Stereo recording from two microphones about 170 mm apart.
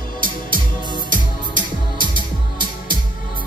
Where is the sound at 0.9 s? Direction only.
25° right (ahead or behind).